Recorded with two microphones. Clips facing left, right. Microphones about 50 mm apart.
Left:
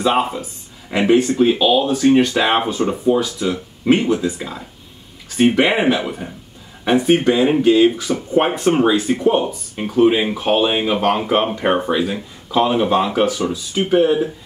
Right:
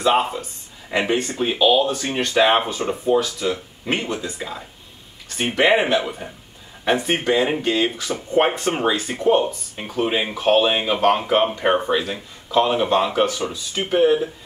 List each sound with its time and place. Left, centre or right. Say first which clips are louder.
0.0 s speech: left 1 dB; centre
9.1 s speech: left 2 dB; centre
9.4 s speech: left 2 dB; centre